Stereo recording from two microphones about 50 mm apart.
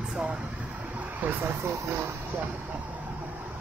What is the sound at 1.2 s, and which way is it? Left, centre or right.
Vehicle, right.